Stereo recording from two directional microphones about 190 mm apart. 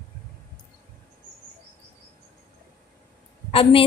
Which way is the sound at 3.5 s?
30° left (ahead or behind).